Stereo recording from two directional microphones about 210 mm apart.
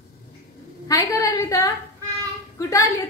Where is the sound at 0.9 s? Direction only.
15° left (ahead or behind).